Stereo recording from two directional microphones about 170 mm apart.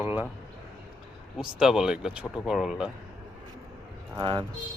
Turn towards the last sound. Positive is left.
turn(degrees=-25)  # may be behind; listen again after turning